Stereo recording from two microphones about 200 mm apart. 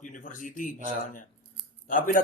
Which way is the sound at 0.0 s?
40° left (ahead or behind).